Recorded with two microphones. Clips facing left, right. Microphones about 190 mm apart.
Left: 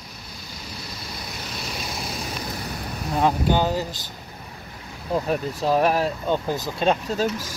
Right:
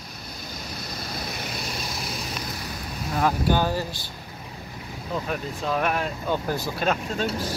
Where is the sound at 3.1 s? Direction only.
20° left (ahead or behind).